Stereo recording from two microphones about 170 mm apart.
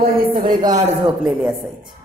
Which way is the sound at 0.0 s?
55° right (ahead or behind).